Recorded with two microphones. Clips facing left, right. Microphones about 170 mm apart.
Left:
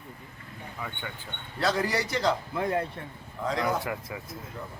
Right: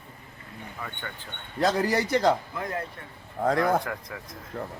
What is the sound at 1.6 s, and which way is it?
Speech, 45° right (ahead or behind).